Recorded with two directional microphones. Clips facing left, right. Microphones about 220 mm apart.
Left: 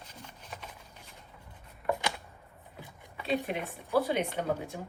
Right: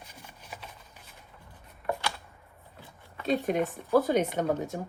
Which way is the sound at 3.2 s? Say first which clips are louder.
Right 5 dB; 45° right (ahead or behind).